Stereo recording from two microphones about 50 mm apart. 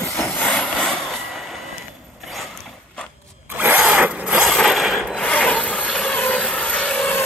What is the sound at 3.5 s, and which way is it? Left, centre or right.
Zipper, right.